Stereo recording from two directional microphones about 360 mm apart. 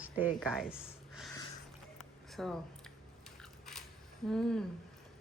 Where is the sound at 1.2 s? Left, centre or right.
Centre.